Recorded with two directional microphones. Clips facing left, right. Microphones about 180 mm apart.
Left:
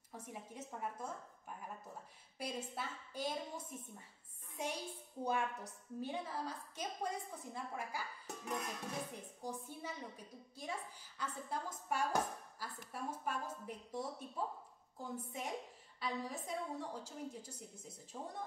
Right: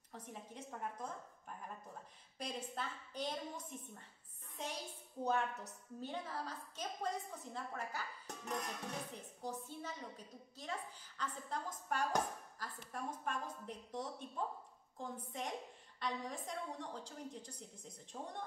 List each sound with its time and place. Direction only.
0.1 s a woman's voice: 10° left (ahead or behind)
2.3 s a woman's voice: 10° left (ahead or behind)